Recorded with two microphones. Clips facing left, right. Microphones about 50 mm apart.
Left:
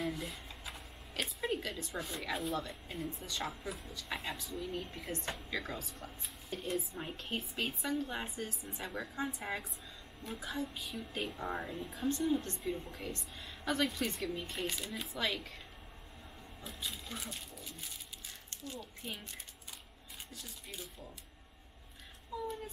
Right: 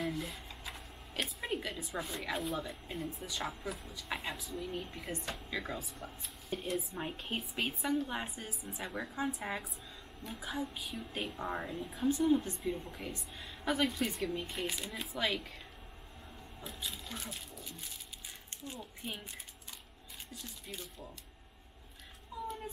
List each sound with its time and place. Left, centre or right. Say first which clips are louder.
0.0 s a sound: right 1 dB; centre
1.1 s a woman's voice: left 1 dB; centre
16.6 s speech: even; centre
18.5 s speech: even; right
20.3 s a woman's voice: right 2 dB; centre